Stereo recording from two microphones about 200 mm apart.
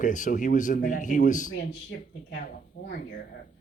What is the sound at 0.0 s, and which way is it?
A man's voice, 40° left (ahead or behind).